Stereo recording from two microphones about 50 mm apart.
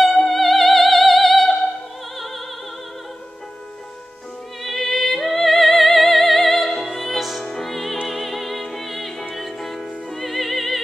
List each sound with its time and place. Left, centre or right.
0.0 s music: centre
2.1 s opera: centre
4.6 s music: centre